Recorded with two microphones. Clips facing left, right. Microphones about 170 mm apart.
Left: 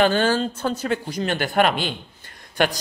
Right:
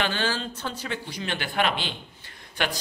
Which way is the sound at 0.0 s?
45° left (ahead or behind).